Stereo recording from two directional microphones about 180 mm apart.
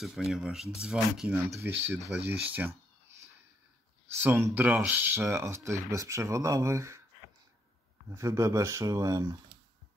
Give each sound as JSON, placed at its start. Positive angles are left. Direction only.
{"t": 0.0, "sound": "speech", "side_deg": 0}
{"t": 4.2, "sound": "speech", "side_deg": -10}
{"t": 8.1, "sound": "speech", "side_deg": -15}